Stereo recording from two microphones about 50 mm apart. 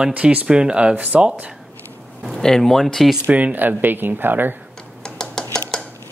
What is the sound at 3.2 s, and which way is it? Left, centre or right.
Speech, right.